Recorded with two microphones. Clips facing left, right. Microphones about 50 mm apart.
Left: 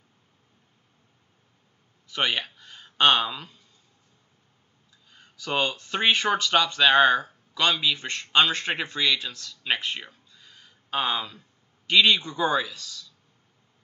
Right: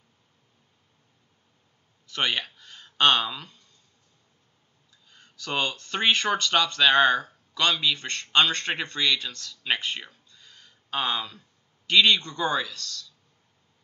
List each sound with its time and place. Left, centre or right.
2.0 s speech: centre
5.1 s a man's voice: centre